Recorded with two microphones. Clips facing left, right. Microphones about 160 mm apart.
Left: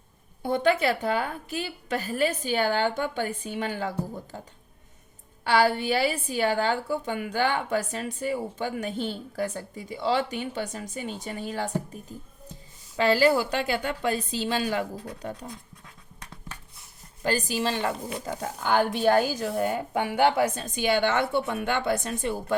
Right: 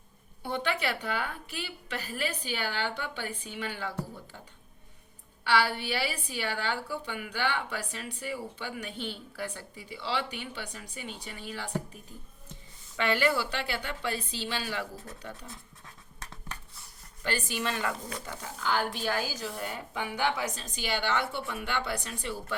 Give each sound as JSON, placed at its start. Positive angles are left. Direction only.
{"t": 0.4, "sound": "a woman's voice", "side_deg": 45}
{"t": 13.0, "sound": "a woman's voice", "side_deg": 35}
{"t": 17.2, "sound": "a woman's voice", "side_deg": 35}
{"t": 18.3, "sound": "a woman's voice", "side_deg": 45}